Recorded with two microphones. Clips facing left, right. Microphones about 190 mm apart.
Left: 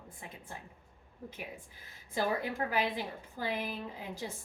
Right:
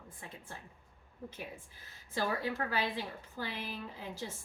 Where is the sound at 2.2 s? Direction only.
15° left (ahead or behind).